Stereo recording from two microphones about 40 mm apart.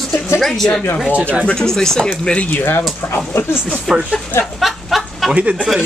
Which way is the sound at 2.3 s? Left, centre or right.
Left.